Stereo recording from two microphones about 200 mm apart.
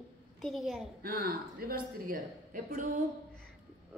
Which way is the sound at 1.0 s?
45° right (ahead or behind).